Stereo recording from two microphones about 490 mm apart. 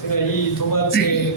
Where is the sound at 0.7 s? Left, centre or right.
Left.